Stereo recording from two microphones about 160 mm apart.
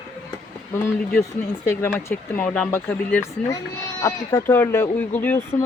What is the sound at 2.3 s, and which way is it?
Speech, 5° left (ahead or behind).